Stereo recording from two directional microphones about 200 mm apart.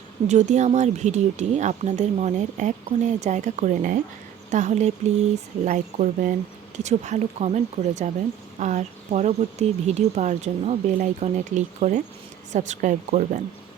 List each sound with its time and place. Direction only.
0.3 s speech: 35° right (ahead or behind)